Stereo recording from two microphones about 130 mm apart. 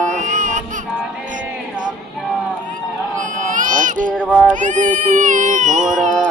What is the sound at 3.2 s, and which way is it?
Baby cry, 80° right.